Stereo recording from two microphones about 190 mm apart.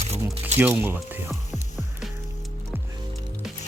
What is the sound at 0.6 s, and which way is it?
Speech, 10° right (ahead or behind).